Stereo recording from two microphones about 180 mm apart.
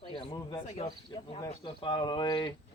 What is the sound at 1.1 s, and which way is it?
Speech, 25° left (ahead or behind).